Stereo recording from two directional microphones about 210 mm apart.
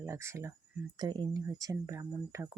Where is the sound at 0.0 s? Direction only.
10° right (ahead or behind).